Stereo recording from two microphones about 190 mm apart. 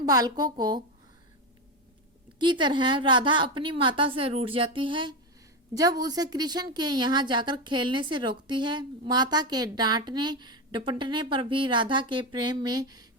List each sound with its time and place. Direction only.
0.0 s a woman's voice: 20° right (ahead or behind)
2.4 s a woman's voice: 25° right (ahead or behind)